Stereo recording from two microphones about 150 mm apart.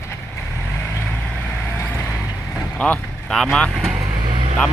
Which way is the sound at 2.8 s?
10° left (ahead or behind).